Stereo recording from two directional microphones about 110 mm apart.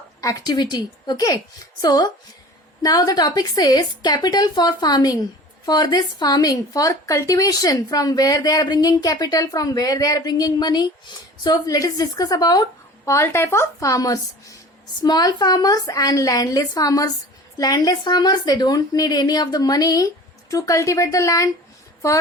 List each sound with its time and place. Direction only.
0.2 s a woman's voice: 30° left (ahead or behind)
13.1 s a woman's voice: 25° left (ahead or behind)